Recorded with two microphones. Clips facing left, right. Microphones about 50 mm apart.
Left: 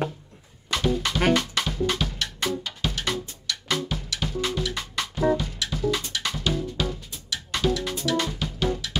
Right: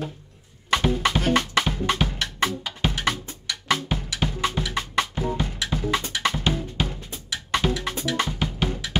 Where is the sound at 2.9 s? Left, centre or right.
Right.